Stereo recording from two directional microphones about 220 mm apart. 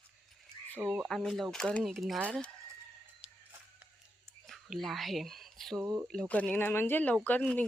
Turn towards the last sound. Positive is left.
turn(degrees=5)  # may be behind; listen again after turning